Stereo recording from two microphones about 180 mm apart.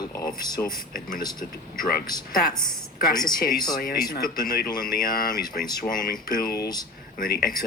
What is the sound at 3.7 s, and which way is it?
A woman's voice, 55° left (ahead or behind).